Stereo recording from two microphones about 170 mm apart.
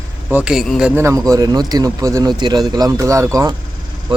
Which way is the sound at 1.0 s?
20° right (ahead or behind).